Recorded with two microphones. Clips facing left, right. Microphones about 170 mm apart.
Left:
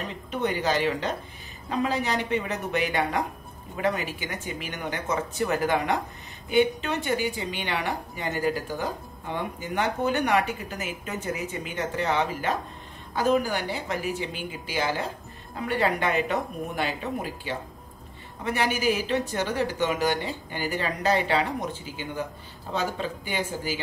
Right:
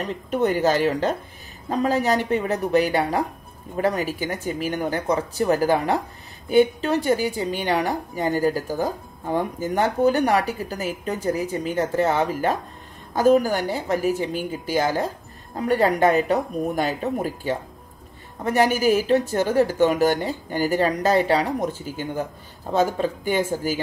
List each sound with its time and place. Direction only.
0.3 s a woman's voice: 45° right (ahead or behind)